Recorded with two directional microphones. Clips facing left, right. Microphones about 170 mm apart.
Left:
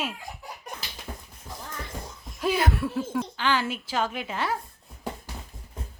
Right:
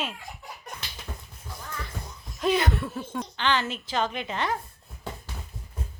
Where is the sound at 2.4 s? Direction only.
10° left (ahead or behind).